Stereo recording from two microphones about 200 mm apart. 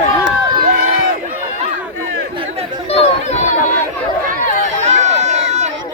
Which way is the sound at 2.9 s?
30° left (ahead or behind).